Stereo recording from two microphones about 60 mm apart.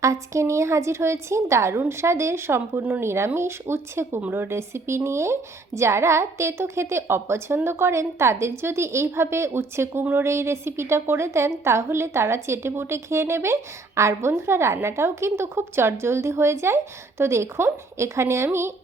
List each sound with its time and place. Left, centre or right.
0.0 s a woman's voice: right